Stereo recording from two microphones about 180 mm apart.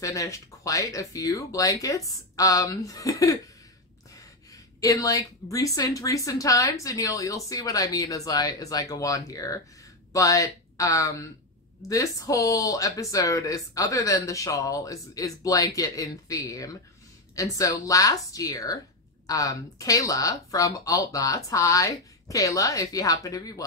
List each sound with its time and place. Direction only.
0.0 s a woman's voice: 15° left (ahead or behind)